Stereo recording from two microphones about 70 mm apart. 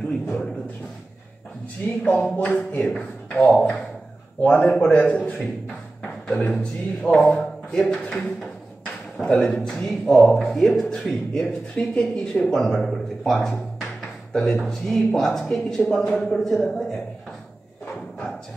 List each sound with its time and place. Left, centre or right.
2.0 s a man's voice: left
7.2 s a sound: centre
7.8 s speech: centre
9.2 s a man's voice: centre
11.4 s a man's voice: centre